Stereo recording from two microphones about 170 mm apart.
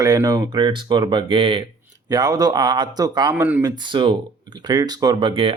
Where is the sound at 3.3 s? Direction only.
10° right (ahead or behind).